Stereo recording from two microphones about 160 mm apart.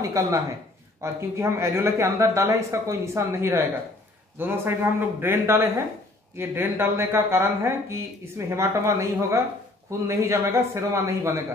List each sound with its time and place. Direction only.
0.0 s speech: 20° right (ahead or behind)